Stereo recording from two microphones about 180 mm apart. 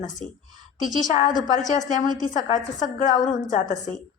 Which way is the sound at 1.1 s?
45° left (ahead or behind).